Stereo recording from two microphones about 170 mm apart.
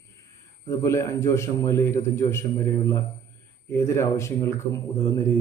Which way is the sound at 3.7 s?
15° left (ahead or behind).